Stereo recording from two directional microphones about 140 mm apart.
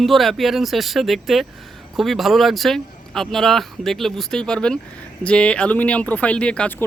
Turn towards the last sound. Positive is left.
turn(degrees=10)  # may be behind; listen again after turning